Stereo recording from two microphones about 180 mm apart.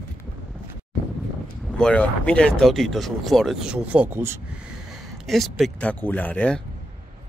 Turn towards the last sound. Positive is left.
turn(degrees=5)  # may be behind; listen again after turning